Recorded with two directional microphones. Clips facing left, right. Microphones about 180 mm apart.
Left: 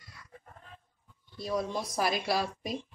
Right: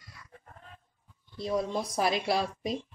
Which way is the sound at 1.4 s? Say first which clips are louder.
Right 2 dB; 30° right (ahead or behind).